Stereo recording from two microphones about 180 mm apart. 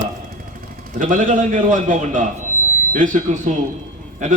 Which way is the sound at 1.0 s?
45° right (ahead or behind).